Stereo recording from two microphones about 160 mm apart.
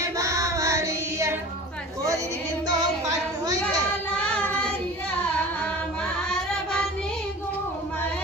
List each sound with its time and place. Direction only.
0.0 s music: 20° right (ahead or behind)
4.2 s child singing: 5° left (ahead or behind)